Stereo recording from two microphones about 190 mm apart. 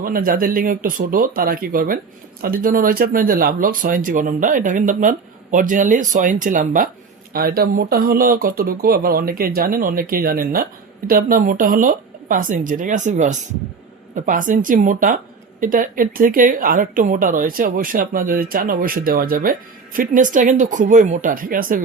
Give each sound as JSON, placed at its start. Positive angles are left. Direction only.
{"t": 0.0, "sound": "speech", "side_deg": -50}